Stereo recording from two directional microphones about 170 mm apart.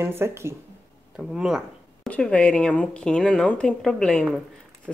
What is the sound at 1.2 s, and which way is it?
Speech, 5° right (ahead or behind).